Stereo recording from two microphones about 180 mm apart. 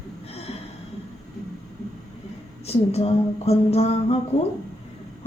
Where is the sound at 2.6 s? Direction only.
35° left (ahead or behind).